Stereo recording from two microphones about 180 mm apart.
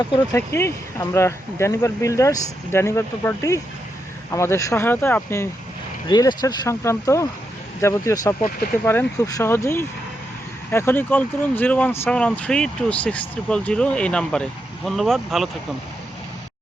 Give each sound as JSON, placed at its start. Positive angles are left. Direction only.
{"t": 0.3, "sound": "speech", "side_deg": 15}